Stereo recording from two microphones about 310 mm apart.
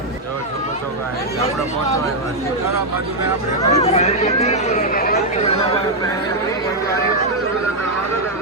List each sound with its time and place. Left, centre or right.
3.6 s speech: centre